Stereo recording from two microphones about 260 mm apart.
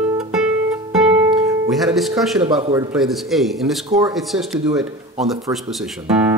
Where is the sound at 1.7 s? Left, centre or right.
Centre.